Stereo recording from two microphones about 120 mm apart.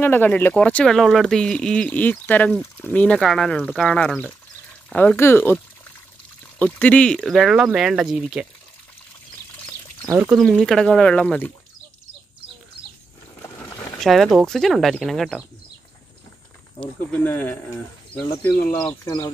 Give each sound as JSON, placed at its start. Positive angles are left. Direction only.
{"t": 0.0, "sound": "speech", "side_deg": 15}
{"t": 3.2, "sound": "speech", "side_deg": 0}
{"t": 6.6, "sound": "speech", "side_deg": 10}
{"t": 10.0, "sound": "speech", "side_deg": -25}
{"t": 10.3, "sound": "speech", "side_deg": 0}
{"t": 13.9, "sound": "speech", "side_deg": 0}
{"t": 16.8, "sound": "speech", "side_deg": 15}
{"t": 19.0, "sound": "speech", "side_deg": 30}